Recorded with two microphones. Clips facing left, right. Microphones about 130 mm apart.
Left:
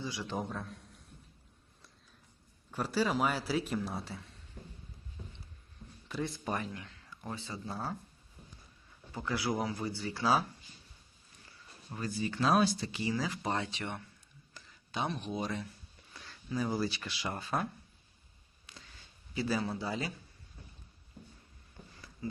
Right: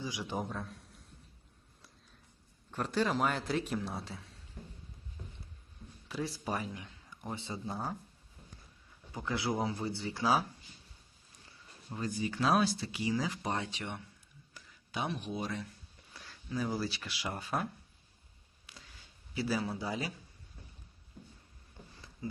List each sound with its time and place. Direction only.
0.0 s a man's voice: 15° right (ahead or behind)
0.3 s a man's voice: centre (ahead or behind)
2.7 s speech: 5° left (ahead or behind)
6.1 s speech: 5° right (ahead or behind)
9.1 s speech: 20° right (ahead or behind)
11.9 s speech: 15° right (ahead or behind); by 12.9 s centre (ahead or behind)
12.9 s speech: 15° right (ahead or behind)
18.6 s a sound: 5° right (ahead or behind)
19.3 s speech: 5° right (ahead or behind)
22.2 s speech: 20° right (ahead or behind)